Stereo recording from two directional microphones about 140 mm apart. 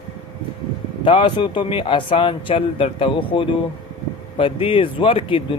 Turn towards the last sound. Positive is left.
turn(degrees=40)  # may be behind; listen again after turning